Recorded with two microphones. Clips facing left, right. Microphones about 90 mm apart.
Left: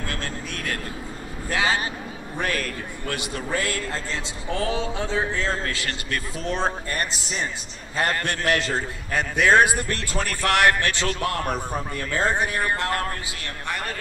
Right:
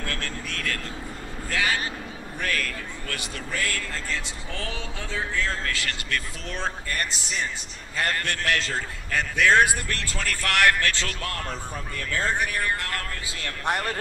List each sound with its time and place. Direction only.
0.0 s vehicle: 20° left (ahead or behind)
2.4 s a sound: 25° left (ahead or behind)
5.3 s a man's voice: 20° left (ahead or behind)